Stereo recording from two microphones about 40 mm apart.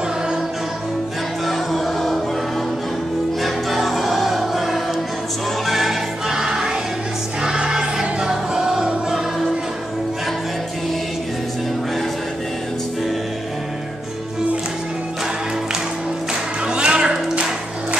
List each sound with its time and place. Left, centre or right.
1.4 s music: centre
3.4 s music: centre
7.4 s choir: centre
8.3 s music: centre
16.6 s music: right